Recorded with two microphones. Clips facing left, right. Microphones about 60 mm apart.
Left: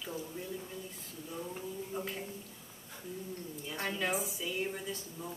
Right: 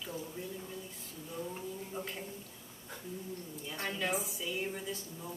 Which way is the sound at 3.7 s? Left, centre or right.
Centre.